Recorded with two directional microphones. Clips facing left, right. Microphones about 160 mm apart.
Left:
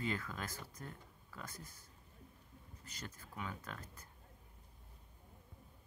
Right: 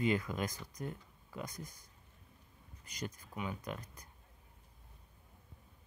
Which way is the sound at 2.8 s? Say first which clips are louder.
Right 8 dB; 15° right (ahead or behind).